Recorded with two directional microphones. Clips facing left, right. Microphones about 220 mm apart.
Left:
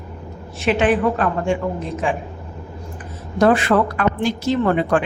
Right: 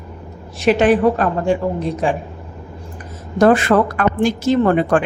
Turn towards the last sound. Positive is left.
turn(degrees=-45)  # may be behind; listen again after turning